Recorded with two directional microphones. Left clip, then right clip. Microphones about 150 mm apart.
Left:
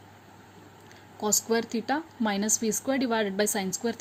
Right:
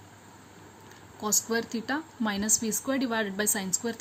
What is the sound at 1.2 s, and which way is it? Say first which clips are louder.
A woman's voice: left 2 dB; 40° left (ahead or behind).